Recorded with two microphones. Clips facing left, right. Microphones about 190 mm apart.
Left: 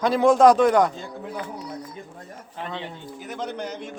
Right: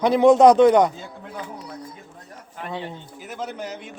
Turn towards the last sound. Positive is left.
turn(degrees=-5)  # may be behind; listen again after turning